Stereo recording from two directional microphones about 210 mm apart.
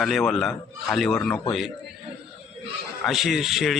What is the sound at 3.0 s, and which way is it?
Speech, centre (ahead or behind).